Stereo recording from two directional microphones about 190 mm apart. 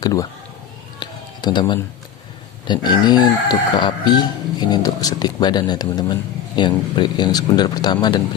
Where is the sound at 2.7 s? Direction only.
20° left (ahead or behind).